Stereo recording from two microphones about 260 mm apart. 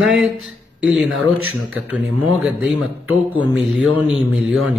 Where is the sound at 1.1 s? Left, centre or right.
Right.